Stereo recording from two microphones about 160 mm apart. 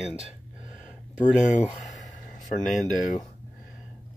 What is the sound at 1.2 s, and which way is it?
Speech, 50° left (ahead or behind).